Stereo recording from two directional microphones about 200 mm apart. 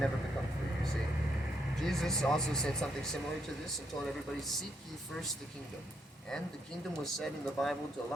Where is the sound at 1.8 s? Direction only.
Centre (ahead or behind).